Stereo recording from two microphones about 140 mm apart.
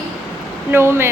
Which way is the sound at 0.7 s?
15° right (ahead or behind).